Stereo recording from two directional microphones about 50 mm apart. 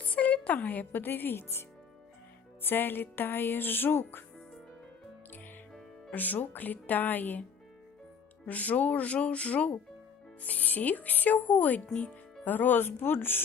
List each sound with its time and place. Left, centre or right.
0.0 s a woman's voice: left
2.6 s speech: left
6.1 s speech: left
8.4 s speech: left